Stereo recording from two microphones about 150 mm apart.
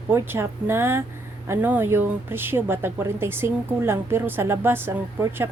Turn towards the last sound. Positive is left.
turn(degrees=-15)  # may be behind; listen again after turning